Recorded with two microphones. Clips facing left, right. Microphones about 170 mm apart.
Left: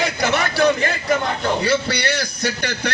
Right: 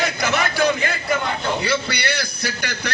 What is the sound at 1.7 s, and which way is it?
Speech, 40° left (ahead or behind).